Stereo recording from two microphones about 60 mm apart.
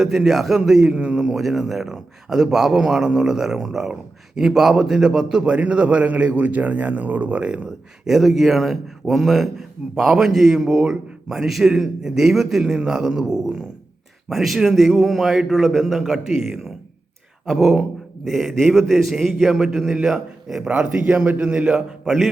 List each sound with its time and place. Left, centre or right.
0.0 s a man's voice: centre
8.0 s a man's voice: centre
12.6 s a man's voice: centre
20.7 s a man's voice: right
22.0 s a man's voice: centre